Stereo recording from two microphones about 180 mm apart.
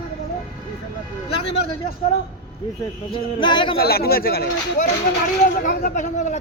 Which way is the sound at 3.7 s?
60° left (ahead or behind).